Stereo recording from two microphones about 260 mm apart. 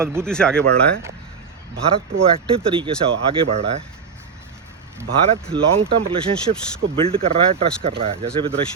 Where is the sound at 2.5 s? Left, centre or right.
Centre.